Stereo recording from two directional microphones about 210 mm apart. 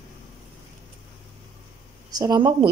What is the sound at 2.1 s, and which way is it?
Speech, 20° right (ahead or behind).